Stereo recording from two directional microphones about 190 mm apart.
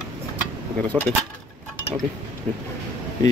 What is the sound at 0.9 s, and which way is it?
Speech, 10° left (ahead or behind).